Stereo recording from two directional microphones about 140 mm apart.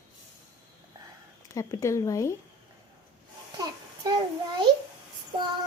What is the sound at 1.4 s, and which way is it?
Speech, 25° left (ahead or behind).